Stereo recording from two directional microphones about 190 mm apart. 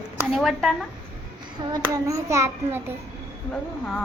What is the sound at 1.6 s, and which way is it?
Child singing, 20° right (ahead or behind).